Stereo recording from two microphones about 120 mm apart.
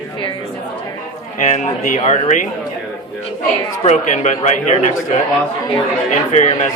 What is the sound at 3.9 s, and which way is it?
Speech, 75° left (ahead or behind).